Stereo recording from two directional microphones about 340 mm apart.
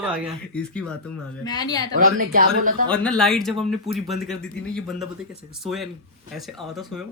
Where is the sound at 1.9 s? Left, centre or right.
Right.